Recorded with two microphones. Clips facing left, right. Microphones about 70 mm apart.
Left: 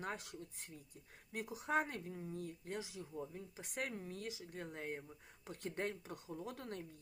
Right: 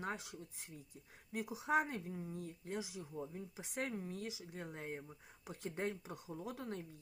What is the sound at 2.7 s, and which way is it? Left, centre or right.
Speech, centre.